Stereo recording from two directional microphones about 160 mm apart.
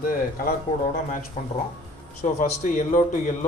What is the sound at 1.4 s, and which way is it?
Speech, 40° left (ahead or behind).